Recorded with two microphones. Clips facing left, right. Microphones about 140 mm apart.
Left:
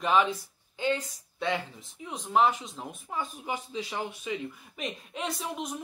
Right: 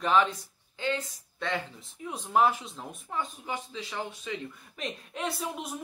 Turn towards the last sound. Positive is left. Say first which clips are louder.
# left 1 dB
turn(degrees=-5)  # may be behind; listen again after turning